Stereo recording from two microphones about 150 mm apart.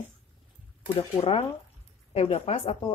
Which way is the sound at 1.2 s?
45° left (ahead or behind).